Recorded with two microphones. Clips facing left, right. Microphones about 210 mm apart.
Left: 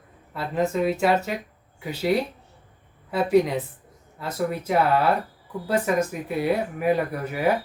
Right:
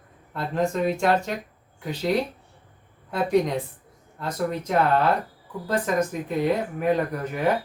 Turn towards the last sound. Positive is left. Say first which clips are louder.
# even
turn(degrees=10)  # may be behind; listen again after turning